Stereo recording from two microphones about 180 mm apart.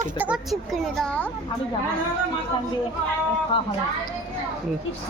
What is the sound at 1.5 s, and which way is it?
Speech, 30° left (ahead or behind).